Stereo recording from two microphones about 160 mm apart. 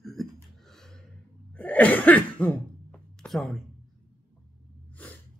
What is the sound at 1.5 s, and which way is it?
Cough, 10° left (ahead or behind).